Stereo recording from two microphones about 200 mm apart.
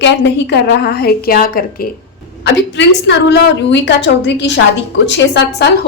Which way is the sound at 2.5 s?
60° left (ahead or behind).